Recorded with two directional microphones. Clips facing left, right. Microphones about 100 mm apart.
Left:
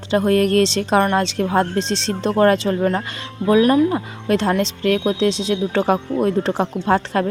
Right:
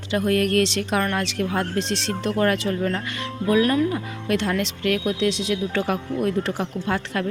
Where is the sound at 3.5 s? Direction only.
25° left (ahead or behind).